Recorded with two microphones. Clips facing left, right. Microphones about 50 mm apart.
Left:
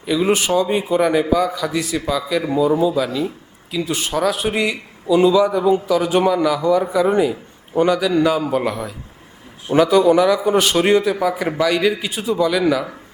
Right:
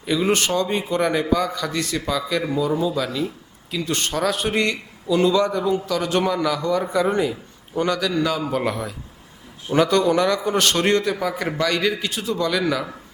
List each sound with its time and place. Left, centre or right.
0.0 s a man's voice: centre